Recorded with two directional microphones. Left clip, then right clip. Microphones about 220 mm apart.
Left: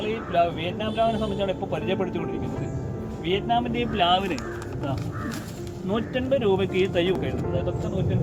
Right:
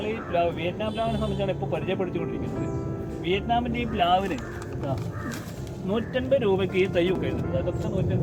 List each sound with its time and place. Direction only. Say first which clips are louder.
0.0 s speech: left 2 dB; 10° left (ahead or behind)
3.2 s speech: left 1 dB; 5° left (ahead or behind)
5.9 s speech: even; centre (ahead or behind)